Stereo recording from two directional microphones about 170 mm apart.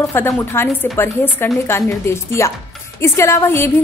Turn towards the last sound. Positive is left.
turn(degrees=15)  # may be behind; listen again after turning